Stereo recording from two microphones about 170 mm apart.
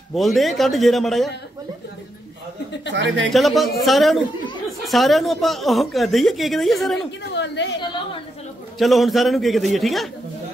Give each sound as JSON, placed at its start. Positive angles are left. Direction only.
{"t": 0.1, "sound": "a woman's voice", "side_deg": 0}
{"t": 2.9, "sound": "speech", "side_deg": -90}
{"t": 3.3, "sound": "a woman's voice", "side_deg": 0}
{"t": 7.3, "sound": "a woman's voice", "side_deg": 90}
{"t": 8.7, "sound": "a woman's voice", "side_deg": 0}